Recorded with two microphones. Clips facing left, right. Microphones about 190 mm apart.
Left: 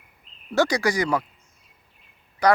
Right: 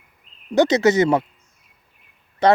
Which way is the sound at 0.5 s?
20° right (ahead or behind).